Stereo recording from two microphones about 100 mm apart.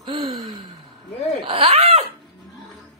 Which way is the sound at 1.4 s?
65° right (ahead or behind).